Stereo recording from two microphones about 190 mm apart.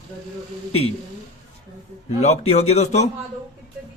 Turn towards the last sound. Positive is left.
turn(degrees=35)  # may be behind; listen again after turning